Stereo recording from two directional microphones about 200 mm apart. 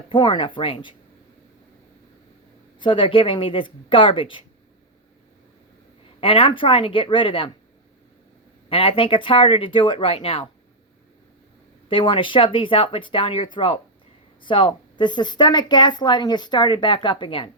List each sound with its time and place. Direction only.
0.1 s a woman's voice: 25° left (ahead or behind)
2.7 s a woman's voice: 25° left (ahead or behind)
6.1 s a woman's voice: 25° left (ahead or behind)
8.7 s a woman's voice: 25° left (ahead or behind)
11.9 s a woman's voice: 25° left (ahead or behind)